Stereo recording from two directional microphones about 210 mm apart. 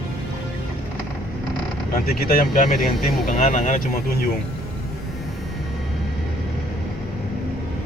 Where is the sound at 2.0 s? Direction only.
45° left (ahead or behind).